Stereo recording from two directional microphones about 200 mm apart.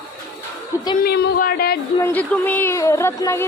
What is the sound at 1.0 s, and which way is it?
Speech, 50° left (ahead or behind).